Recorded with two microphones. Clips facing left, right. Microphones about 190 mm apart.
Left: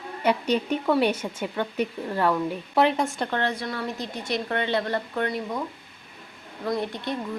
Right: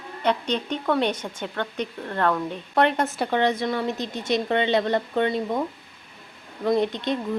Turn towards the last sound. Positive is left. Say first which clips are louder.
# right 5 dB
turn(degrees=-20)  # may be behind; listen again after turning